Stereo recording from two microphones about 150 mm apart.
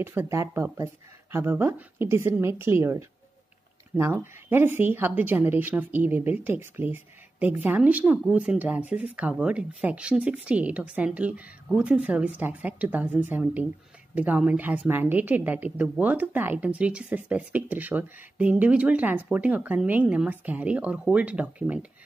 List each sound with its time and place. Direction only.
0.0 s speech: 15° right (ahead or behind)